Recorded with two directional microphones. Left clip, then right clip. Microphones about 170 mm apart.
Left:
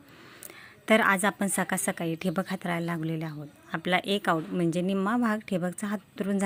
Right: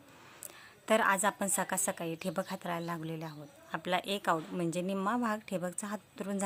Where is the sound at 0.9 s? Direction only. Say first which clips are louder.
Left 5 dB; 10° left (ahead or behind).